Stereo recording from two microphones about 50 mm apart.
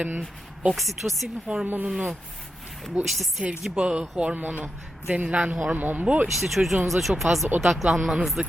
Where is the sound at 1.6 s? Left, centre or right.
Right.